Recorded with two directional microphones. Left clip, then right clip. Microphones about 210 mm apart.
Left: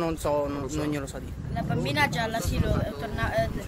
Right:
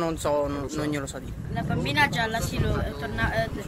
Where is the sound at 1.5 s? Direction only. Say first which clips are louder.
Right 1 dB; 50° left (ahead or behind).